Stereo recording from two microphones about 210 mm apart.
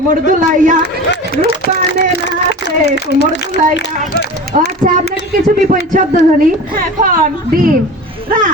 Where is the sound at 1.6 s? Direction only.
50° left (ahead or behind).